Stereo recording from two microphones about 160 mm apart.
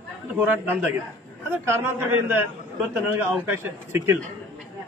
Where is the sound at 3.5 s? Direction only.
15° right (ahead or behind).